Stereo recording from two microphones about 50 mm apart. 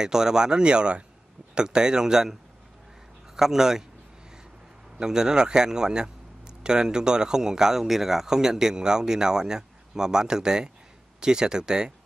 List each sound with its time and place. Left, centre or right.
0.0 s speech: centre
3.3 s speech: centre
4.9 s speech: centre